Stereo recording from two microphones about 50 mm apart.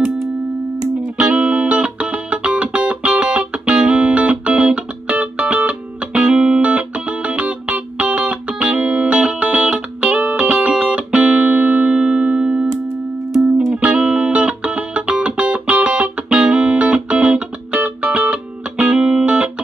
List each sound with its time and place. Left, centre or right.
1.3 s music: right
13.3 s music: centre
13.7 s music: right